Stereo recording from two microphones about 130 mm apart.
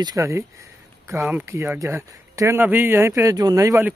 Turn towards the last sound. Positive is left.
turn(degrees=-25)  # may be behind; listen again after turning